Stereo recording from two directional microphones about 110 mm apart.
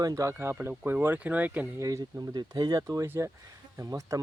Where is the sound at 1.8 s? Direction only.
30° right (ahead or behind).